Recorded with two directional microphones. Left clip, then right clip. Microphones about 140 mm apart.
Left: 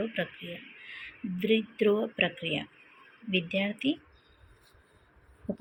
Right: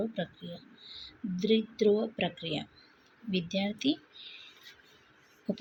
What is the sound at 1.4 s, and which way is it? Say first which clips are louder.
Speech: left 1 dB; 15° right (ahead or behind).